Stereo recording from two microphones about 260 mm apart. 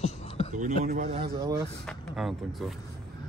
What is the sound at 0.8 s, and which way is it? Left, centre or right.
Speech, right.